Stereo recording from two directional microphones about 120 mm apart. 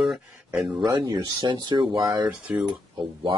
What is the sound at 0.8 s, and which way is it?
Speech, 35° right (ahead or behind).